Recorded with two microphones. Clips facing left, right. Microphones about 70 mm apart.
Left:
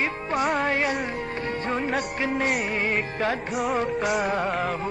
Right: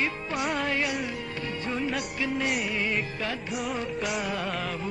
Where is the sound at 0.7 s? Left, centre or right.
Left.